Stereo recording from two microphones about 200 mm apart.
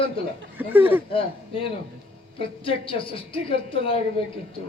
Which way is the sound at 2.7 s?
25° left (ahead or behind).